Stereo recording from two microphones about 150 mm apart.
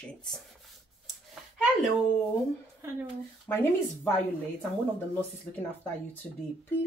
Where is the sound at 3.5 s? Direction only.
15° left (ahead or behind).